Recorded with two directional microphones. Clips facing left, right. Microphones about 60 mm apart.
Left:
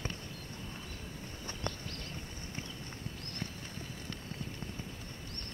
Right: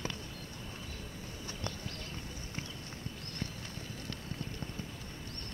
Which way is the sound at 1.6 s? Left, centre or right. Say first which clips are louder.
Left 3 dB; left.